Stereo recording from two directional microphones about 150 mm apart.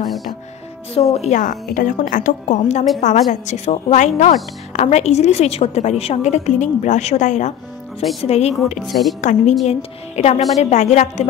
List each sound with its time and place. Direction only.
0.0 s music: centre (ahead or behind)
1.1 s a woman's voice: 45° left (ahead or behind)
1.4 s a woman's voice: 65° left (ahead or behind); by 8.7 s 45° left (ahead or behind)
8.8 s a woman's voice: centre (ahead or behind)
9.2 s a woman's voice: 55° left (ahead or behind)